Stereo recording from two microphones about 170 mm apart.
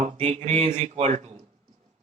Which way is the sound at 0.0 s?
40° right (ahead or behind).